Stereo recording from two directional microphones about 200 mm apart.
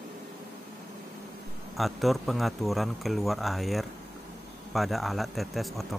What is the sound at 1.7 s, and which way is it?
Speech, centre (ahead or behind).